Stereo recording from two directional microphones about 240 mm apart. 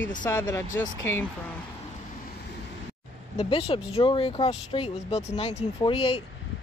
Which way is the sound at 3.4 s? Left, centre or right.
Left.